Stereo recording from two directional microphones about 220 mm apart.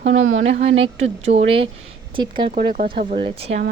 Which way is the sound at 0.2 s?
55° right (ahead or behind).